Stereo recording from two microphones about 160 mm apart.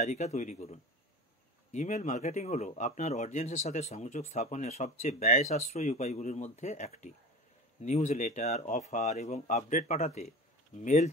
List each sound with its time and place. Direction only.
0.0 s speech: 45° left (ahead or behind)